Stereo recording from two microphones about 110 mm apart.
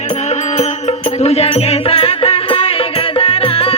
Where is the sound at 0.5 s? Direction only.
75° left (ahead or behind).